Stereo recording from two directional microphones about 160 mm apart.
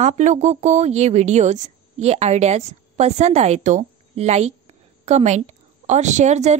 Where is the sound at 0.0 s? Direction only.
50° right (ahead or behind).